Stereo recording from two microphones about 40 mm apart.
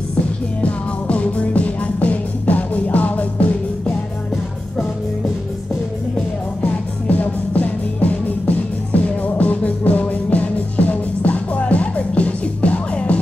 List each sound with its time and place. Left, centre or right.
0.6 s music: left
6.6 s music: left